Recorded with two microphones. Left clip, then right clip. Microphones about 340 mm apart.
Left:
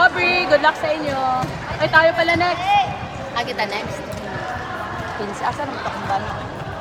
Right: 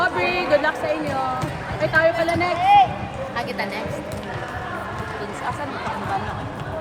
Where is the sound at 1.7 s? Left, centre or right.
Left.